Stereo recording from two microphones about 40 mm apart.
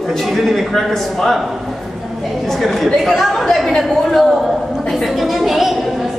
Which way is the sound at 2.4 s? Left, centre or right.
Centre.